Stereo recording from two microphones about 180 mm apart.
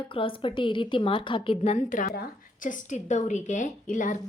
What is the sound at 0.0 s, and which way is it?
A woman's voice, 30° left (ahead or behind).